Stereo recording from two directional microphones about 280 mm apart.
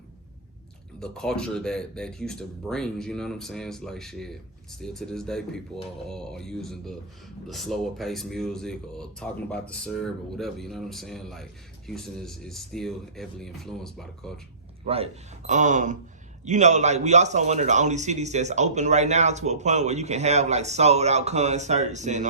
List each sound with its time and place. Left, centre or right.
0.9 s speech: centre
14.8 s a man's voice: right